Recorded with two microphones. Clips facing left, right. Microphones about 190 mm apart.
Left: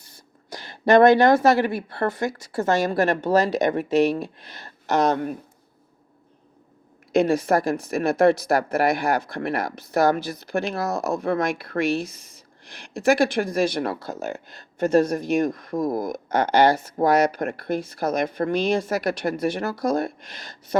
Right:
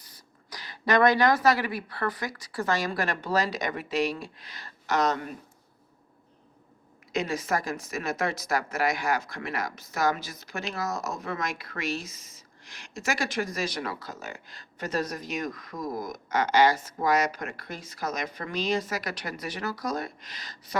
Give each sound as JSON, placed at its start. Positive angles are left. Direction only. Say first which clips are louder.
{"t": 0.5, "sound": "a sound", "louder": "left 8 dB", "side_deg": 25}
{"t": 1.2, "sound": "speech", "louder": "left 6 dB", "side_deg": 25}
{"t": 3.2, "sound": "speech", "louder": "left 6 dB", "side_deg": 55}
{"t": 7.1, "sound": "speech", "louder": "left 9 dB", "side_deg": 55}